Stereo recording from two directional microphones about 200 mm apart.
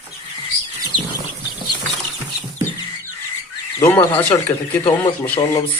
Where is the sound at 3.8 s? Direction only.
10° left (ahead or behind).